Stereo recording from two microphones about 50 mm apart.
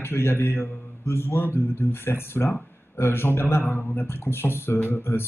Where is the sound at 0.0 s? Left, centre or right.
Left.